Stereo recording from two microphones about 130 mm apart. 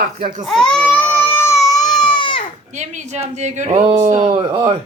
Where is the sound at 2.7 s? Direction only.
65° right (ahead or behind).